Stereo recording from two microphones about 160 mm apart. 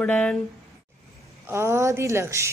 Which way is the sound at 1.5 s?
15° right (ahead or behind).